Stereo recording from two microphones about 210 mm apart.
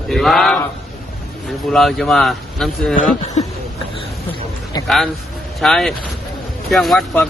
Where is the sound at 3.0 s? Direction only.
30° left (ahead or behind).